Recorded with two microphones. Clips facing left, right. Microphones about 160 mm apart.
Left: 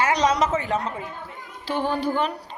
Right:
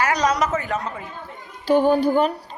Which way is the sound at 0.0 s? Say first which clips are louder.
Even; 25° left (ahead or behind).